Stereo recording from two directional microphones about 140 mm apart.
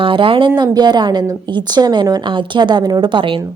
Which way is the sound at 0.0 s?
40° right (ahead or behind).